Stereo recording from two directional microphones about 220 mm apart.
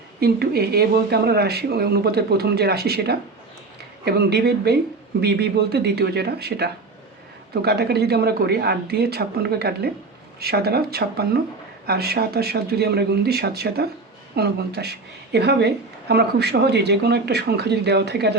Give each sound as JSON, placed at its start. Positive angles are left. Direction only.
{"t": 0.2, "sound": "a woman's voice", "side_deg": -45}